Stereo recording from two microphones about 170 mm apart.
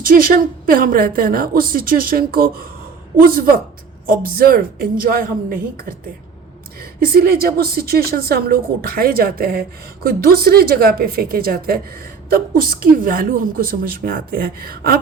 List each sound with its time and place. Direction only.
0.0 s a woman's voice: 60° right (ahead or behind)
7.0 s a woman's voice: 65° right (ahead or behind)